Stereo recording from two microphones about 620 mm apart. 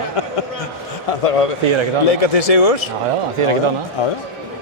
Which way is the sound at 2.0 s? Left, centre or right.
Left.